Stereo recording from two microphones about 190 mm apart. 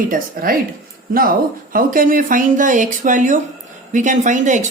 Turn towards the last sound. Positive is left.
turn(degrees=-40)  # may be behind; listen again after turning